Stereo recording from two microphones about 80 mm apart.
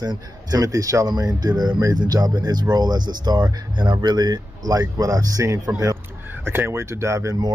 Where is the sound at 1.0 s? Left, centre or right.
Right.